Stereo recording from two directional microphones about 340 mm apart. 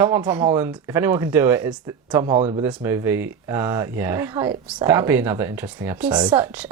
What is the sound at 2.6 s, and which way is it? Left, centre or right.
Speech, centre.